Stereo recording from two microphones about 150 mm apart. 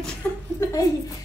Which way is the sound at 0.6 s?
20° left (ahead or behind).